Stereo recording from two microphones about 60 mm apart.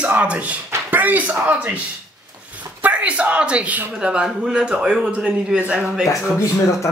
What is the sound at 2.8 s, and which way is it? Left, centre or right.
A man's voice, right.